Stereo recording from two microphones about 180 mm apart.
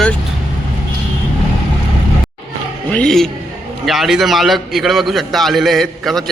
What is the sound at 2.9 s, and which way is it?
A man's voice, 5° left (ahead or behind).